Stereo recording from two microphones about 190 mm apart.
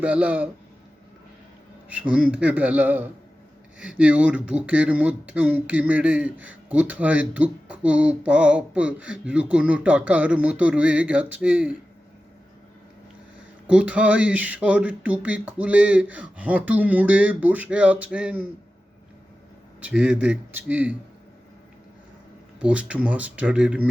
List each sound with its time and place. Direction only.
0.0 s speech: 5° right (ahead or behind)
1.9 s speech: 5° right (ahead or behind)
13.7 s speech: 5° right (ahead or behind)
19.8 s speech: 5° right (ahead or behind)
22.6 s speech: 5° right (ahead or behind)